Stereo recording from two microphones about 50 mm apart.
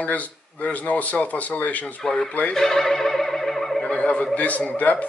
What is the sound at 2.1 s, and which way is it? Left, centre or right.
Speech, centre.